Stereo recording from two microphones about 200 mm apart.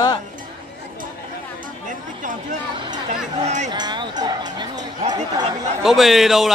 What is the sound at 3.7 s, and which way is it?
Speech, 20° right (ahead or behind).